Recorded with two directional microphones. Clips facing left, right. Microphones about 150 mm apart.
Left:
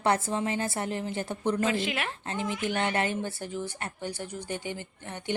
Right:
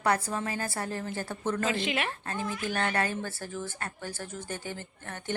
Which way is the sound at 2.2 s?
20° left (ahead or behind).